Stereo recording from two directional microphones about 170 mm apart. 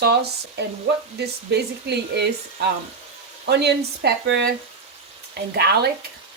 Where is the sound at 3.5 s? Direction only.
75° right (ahead or behind).